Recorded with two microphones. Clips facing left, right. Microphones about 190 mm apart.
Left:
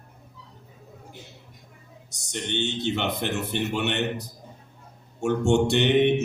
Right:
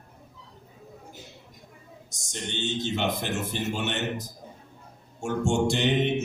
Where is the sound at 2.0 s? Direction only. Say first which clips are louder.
Left 4 dB; 65° left (ahead or behind).